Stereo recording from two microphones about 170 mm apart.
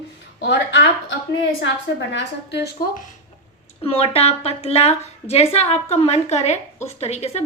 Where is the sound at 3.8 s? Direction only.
35° left (ahead or behind).